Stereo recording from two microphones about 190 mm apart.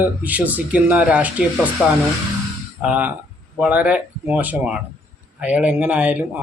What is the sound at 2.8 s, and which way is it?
A man's voice, 5° right (ahead or behind).